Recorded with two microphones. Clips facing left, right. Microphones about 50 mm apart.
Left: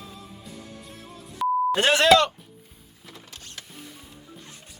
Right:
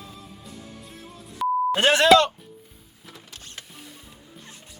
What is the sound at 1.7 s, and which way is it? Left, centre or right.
Speech, right.